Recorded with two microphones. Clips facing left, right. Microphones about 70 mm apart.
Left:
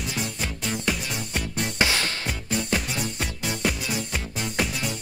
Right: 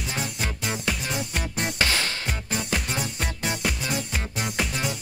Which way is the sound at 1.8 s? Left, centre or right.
Centre.